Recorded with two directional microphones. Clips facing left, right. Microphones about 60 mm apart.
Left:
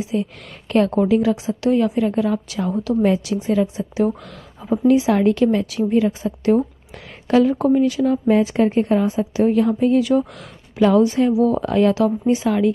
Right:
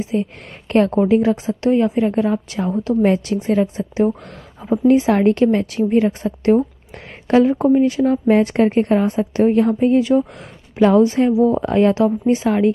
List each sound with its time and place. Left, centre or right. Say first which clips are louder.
0.0 s a woman's voice: right 2 dB; right
1.7 s a woman's voice: right 2 dB; right
3.0 s a woman's voice: right 2 dB; right
7.2 s a woman's voice: right 2 dB; right
9.4 s a woman's voice: right 2 dB; right